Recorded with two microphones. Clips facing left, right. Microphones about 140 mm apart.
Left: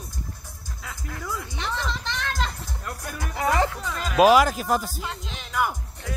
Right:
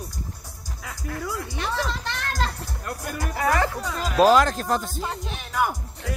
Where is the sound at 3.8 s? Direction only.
10° right (ahead or behind).